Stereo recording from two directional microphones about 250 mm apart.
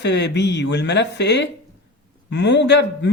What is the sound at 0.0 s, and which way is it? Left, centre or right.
Speech, left.